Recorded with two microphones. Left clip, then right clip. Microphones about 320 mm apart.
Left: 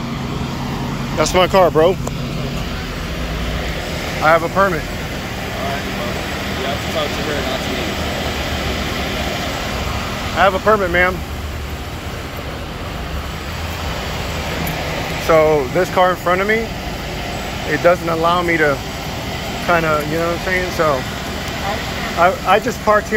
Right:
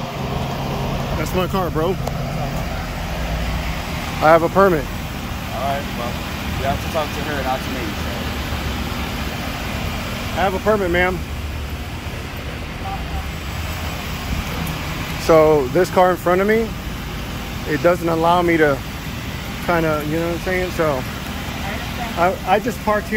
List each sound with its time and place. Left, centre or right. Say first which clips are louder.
1.2 s speech: left 11 dB; centre
4.2 s speech: right 1 dB; centre
10.4 s speech: left 5 dB; centre
15.2 s speech: even; centre
17.8 s speech: left 2 dB; centre
22.2 s speech: left 4 dB; centre